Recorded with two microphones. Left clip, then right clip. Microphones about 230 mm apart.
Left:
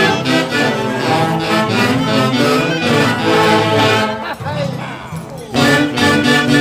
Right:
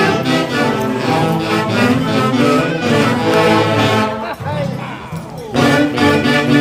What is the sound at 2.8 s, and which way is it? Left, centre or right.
Music, left.